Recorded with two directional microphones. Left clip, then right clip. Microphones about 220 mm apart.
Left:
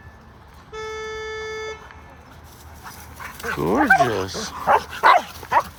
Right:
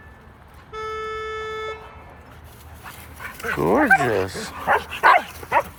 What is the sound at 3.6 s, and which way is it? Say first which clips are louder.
Speech: even; 20° left (ahead or behind).